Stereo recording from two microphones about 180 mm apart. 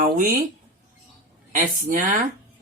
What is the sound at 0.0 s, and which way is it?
Speech, 50° right (ahead or behind).